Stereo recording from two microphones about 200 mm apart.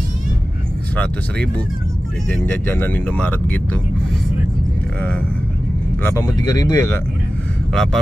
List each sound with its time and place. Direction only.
0.9 s speech: 5° left (ahead or behind)
6.1 s speech: 20° left (ahead or behind)
7.7 s speech: centre (ahead or behind)